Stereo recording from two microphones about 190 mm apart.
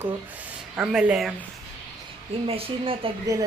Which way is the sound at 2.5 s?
30° right (ahead or behind).